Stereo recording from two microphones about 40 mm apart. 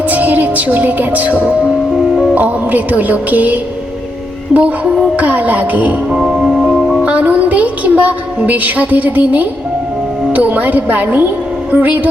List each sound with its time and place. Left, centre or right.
0.1 s music: right
6.1 s music: centre
7.0 s a woman's voice: right
10.3 s music: right